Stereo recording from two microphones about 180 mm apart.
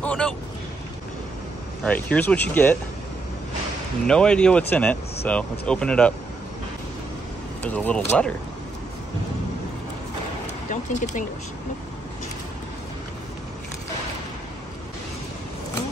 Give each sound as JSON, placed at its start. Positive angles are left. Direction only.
{"t": 0.0, "sound": "speech", "side_deg": 5}
{"t": 1.9, "sound": "speech", "side_deg": 10}
{"t": 4.1, "sound": "speech", "side_deg": 5}
{"t": 7.6, "sound": "speech", "side_deg": 10}
{"t": 10.4, "sound": "a sound", "side_deg": 45}